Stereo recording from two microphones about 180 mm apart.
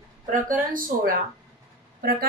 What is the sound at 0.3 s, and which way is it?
A woman's voice, 50° right (ahead or behind).